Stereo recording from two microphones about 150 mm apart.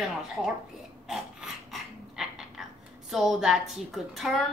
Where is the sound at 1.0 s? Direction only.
5° right (ahead or behind).